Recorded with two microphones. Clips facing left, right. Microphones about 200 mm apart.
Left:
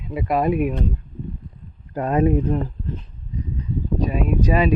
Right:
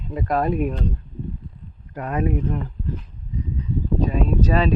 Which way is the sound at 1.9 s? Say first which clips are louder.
Left 5 dB; 30° left (ahead or behind).